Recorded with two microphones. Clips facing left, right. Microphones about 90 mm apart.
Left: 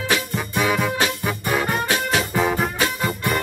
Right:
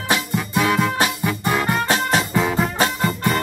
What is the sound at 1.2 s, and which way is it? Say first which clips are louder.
Music: right 2 dB; 10° left (ahead or behind).